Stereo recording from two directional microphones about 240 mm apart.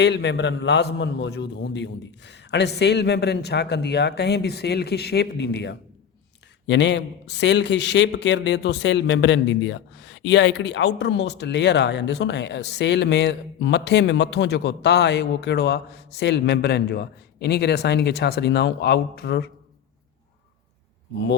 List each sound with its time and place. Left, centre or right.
0.0 s a man's voice: left